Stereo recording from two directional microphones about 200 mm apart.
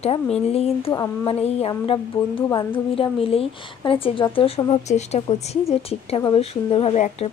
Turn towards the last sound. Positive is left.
turn(degrees=30)  # may be behind; listen again after turning